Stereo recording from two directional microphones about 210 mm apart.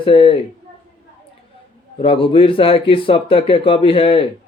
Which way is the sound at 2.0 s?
25° left (ahead or behind).